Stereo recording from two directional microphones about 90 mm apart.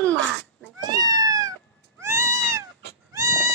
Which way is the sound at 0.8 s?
45° right (ahead or behind).